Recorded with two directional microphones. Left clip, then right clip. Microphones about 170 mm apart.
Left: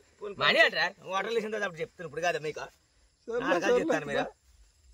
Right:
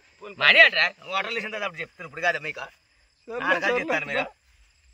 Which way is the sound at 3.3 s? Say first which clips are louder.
Even; 20° right (ahead or behind).